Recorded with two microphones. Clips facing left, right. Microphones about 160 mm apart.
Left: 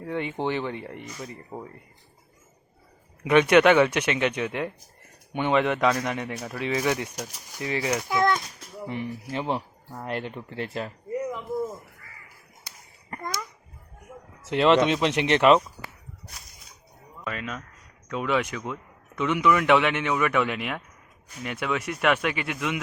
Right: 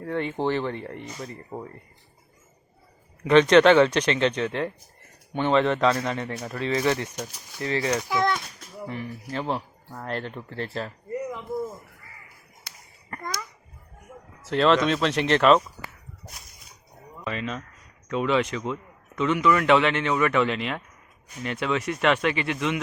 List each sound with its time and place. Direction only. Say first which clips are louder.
0.0 s a man's voice: right 2 dB; 15° left (ahead or behind)
3.2 s a man's voice: right 2 dB; 10° left (ahead or behind)
8.1 s a child's voice: left 3 dB; 50° left (ahead or behind)
8.9 s a man's voice: left 2 dB; 20° left (ahead or behind)
14.5 s a man's voice: left 1 dB; 15° left (ahead or behind)
17.2 s a man's voice: right 3 dB; 5° left (ahead or behind)